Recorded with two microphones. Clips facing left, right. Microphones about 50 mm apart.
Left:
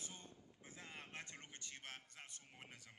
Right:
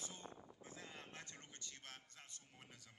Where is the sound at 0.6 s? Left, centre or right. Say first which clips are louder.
Left 2 dB; left.